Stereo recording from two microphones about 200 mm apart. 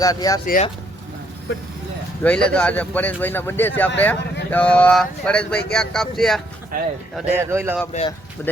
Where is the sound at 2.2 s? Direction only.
5° left (ahead or behind).